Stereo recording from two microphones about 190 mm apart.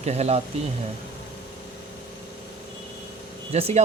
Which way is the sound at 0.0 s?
35° right (ahead or behind).